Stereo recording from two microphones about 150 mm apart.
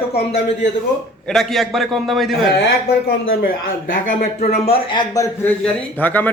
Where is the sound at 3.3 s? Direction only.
70° left (ahead or behind).